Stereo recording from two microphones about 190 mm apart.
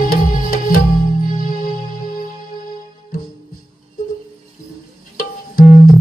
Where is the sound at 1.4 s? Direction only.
50° left (ahead or behind).